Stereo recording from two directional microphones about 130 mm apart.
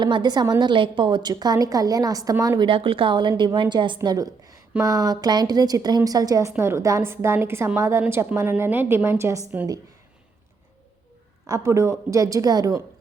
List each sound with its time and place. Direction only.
0.0 s a woman's voice: 35° right (ahead or behind)
2.6 s a woman's voice: 40° right (ahead or behind); by 9.5 s 20° right (ahead or behind)
11.4 s a woman's voice: 25° right (ahead or behind)